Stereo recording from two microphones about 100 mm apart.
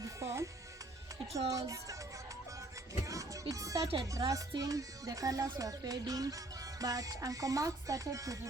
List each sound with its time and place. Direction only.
0.0 s music: 30° right (ahead or behind)
1.3 s speech: 35° right (ahead or behind)
3.0 s music: 35° right (ahead or behind)
3.5 s speech: 35° right (ahead or behind)